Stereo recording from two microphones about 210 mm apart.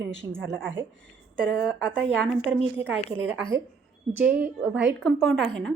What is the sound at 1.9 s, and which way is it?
Speech, 5° left (ahead or behind).